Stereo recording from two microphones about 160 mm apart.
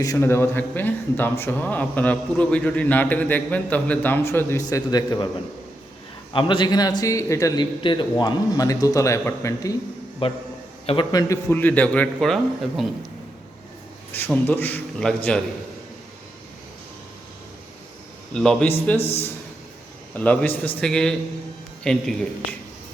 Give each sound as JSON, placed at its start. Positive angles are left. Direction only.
{"t": 0.0, "sound": "a man's voice", "side_deg": 20}
{"t": 6.3, "sound": "a man's voice", "side_deg": 30}
{"t": 10.2, "sound": "a man's voice", "side_deg": 35}
{"t": 14.1, "sound": "speech", "side_deg": 10}
{"t": 18.3, "sound": "a man's voice", "side_deg": 5}
{"t": 20.1, "sound": "a man's voice", "side_deg": 10}